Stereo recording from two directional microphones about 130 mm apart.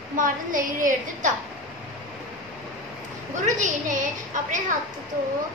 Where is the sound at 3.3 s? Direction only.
75° right (ahead or behind).